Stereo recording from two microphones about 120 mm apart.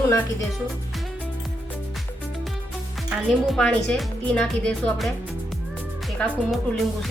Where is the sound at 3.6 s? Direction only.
5° left (ahead or behind).